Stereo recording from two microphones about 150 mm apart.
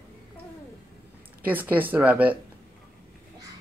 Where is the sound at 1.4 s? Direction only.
10° right (ahead or behind).